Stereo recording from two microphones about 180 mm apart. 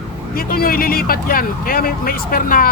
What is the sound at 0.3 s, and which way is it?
Speech, 55° left (ahead or behind).